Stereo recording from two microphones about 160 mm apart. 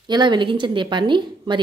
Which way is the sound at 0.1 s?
30° right (ahead or behind).